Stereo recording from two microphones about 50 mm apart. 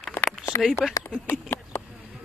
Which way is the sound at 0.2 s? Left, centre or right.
Left.